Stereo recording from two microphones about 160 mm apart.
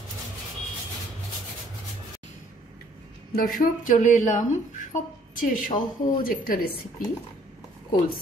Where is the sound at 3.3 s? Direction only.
60° left (ahead or behind).